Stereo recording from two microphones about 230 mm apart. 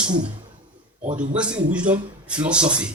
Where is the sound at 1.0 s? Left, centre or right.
Right.